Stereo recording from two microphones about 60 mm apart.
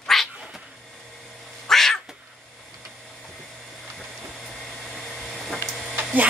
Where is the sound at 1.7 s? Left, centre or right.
Centre.